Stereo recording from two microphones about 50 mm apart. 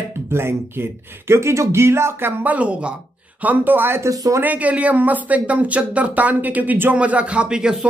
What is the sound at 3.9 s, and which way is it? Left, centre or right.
Speech, right.